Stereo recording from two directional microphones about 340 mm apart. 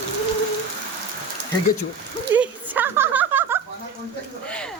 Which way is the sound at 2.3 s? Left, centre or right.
Centre.